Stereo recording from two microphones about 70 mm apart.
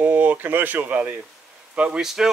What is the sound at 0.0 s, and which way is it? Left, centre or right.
Speech, right.